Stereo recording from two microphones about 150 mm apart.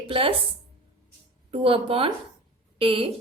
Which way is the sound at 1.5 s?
35° right (ahead or behind).